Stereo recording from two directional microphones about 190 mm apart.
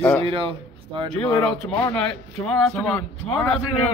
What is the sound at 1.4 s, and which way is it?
A man's voice, 5° left (ahead or behind).